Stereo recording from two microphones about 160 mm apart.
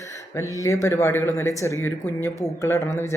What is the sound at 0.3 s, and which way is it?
Speech, 20° left (ahead or behind).